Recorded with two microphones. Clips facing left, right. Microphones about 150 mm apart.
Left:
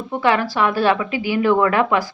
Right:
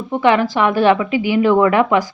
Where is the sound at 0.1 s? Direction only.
20° right (ahead or behind).